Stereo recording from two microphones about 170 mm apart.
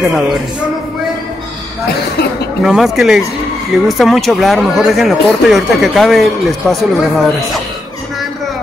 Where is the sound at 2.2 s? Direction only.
65° left (ahead or behind).